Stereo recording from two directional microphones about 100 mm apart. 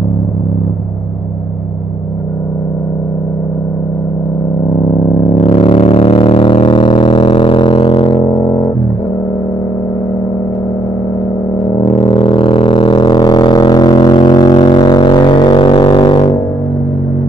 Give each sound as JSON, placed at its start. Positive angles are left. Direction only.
{"t": 4.8, "sound": "vehicle", "side_deg": 40}
{"t": 5.4, "sound": "a sound", "side_deg": 55}
{"t": 11.8, "sound": "didgeridoo", "side_deg": 55}